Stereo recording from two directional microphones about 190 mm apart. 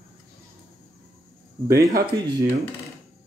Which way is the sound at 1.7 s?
20° right (ahead or behind).